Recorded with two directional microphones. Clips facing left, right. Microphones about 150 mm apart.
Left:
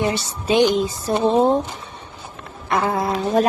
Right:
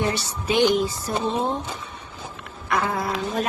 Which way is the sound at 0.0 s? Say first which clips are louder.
Left 3 dB; 20° left (ahead or behind).